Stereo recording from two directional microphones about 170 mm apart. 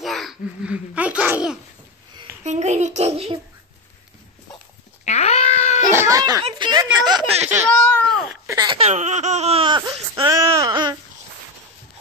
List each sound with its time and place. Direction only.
0.0 s speech: centre (ahead or behind)
2.4 s speech: 45° right (ahead or behind)
5.0 s cat: 40° left (ahead or behind)
5.9 s speech: 20° right (ahead or behind)
7.7 s a child's voice: 5° left (ahead or behind)
8.5 s speech: 25° right (ahead or behind)
10.3 s speech: 20° right (ahead or behind)